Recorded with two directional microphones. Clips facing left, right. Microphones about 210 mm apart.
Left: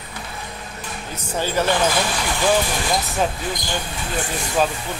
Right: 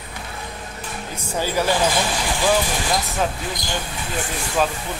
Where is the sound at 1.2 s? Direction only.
10° right (ahead or behind).